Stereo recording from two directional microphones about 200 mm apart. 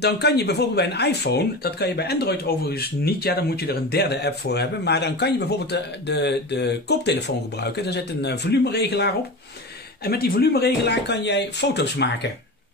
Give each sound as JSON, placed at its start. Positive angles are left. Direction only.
{"t": 0.0, "sound": "speech", "side_deg": 55}